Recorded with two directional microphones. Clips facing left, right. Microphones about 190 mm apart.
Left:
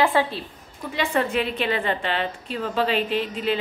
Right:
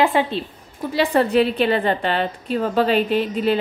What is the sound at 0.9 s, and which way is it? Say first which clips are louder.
A woman's voice: right 7 dB; 35° right (ahead or behind).